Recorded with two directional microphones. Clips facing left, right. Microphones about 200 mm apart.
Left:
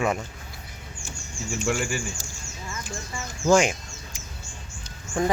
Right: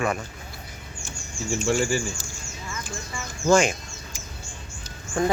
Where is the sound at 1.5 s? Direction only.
30° right (ahead or behind).